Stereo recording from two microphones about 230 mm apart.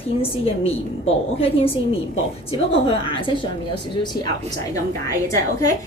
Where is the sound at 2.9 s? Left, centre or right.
Left.